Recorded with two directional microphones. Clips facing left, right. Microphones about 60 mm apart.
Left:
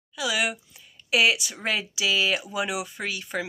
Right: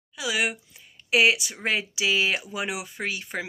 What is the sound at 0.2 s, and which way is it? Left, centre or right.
Speech, right.